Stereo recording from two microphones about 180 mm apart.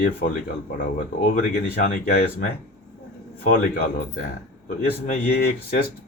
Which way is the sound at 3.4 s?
55° left (ahead or behind).